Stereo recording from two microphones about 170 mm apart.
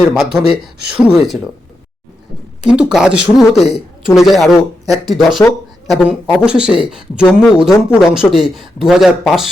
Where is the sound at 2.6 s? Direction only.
5° right (ahead or behind).